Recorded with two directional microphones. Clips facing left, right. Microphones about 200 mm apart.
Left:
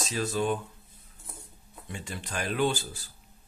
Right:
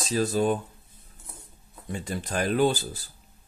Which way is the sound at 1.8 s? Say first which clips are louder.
Right 7 dB; 40° right (ahead or behind).